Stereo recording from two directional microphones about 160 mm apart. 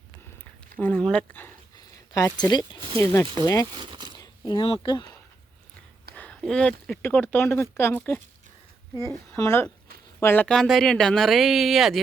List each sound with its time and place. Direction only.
0.8 s speech: 5° left (ahead or behind)
1.7 s a sound: 25° left (ahead or behind)
3.0 s speech: 20° left (ahead or behind)
3.8 s a sound: 30° right (ahead or behind)
4.2 s speech: 30° left (ahead or behind)
6.1 s speech: 5° left (ahead or behind)